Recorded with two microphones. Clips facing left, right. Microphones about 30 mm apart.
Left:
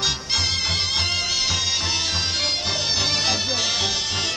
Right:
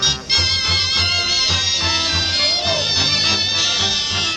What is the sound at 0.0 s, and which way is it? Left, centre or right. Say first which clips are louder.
Music: right 5 dB; right.